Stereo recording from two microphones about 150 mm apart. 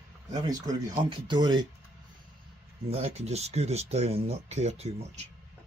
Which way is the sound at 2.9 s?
45° right (ahead or behind).